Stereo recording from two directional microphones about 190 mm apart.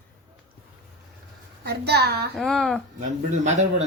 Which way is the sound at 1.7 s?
60° right (ahead or behind).